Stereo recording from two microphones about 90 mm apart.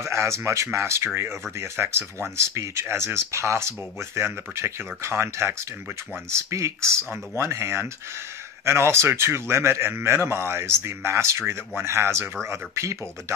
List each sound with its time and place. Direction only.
0.0 s speech: 35° right (ahead or behind)